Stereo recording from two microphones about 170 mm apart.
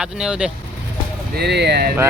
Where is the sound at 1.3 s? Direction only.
80° right.